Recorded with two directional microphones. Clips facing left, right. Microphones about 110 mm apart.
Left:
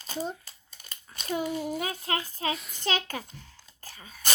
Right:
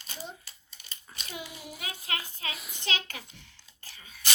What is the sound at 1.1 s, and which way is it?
A child's voice, 45° left (ahead or behind).